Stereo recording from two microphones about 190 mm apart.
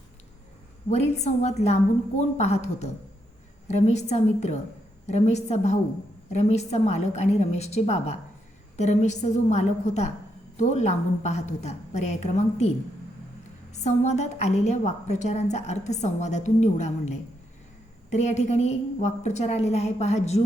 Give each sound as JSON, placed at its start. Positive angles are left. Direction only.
{"t": 0.9, "sound": "a woman's voice", "side_deg": 35}
{"t": 13.8, "sound": "a woman's voice", "side_deg": 35}